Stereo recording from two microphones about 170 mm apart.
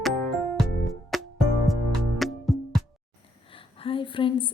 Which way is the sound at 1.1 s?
Centre (ahead or behind).